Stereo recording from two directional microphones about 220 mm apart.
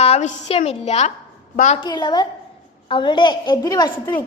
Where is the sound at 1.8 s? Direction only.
20° left (ahead or behind).